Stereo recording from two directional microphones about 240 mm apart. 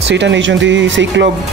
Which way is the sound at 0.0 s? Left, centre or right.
Right.